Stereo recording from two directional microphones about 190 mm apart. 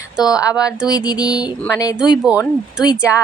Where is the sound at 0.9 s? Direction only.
20° left (ahead or behind).